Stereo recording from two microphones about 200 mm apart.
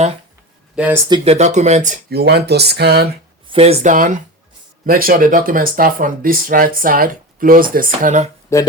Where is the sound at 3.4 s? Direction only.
30° right (ahead or behind).